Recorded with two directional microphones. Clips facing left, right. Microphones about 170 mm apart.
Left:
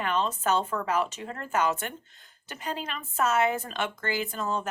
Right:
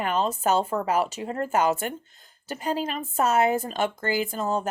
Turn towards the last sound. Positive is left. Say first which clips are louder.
# right 4 dB
turn(degrees=-40)  # may be behind; listen again after turning